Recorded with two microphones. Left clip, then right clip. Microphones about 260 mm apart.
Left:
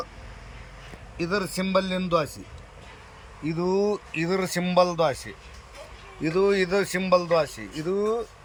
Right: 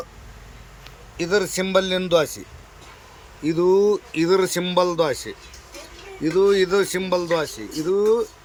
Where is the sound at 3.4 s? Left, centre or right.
Centre.